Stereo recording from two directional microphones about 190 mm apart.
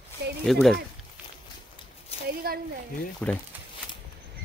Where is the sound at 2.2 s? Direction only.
55° right (ahead or behind).